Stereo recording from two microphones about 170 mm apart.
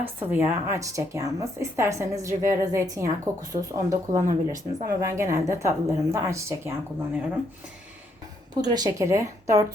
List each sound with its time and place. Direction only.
0.0 s speech: 10° right (ahead or behind)
4.3 s speech: 50° right (ahead or behind)
4.9 s speech: 20° right (ahead or behind)
8.7 s speech: 20° right (ahead or behind)